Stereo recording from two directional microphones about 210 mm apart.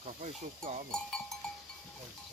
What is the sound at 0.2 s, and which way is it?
Speech, 35° right (ahead or behind).